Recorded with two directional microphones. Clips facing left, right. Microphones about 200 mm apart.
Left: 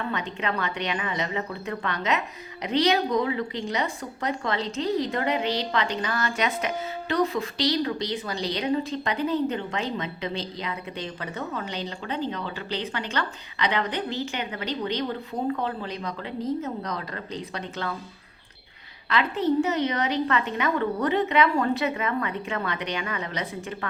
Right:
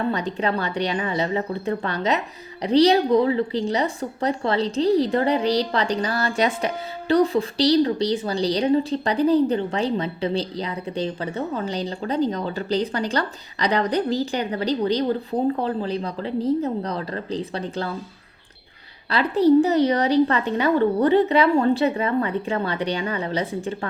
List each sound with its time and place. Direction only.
0.0 s a woman's voice: 35° right (ahead or behind)
19.1 s a woman's voice: 35° right (ahead or behind)